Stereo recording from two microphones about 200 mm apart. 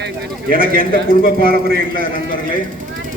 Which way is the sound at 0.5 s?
45° left (ahead or behind).